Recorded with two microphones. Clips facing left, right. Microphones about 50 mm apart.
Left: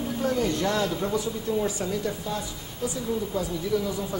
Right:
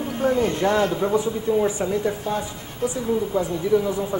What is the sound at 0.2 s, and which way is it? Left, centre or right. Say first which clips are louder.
Speech: right 6 dB; right.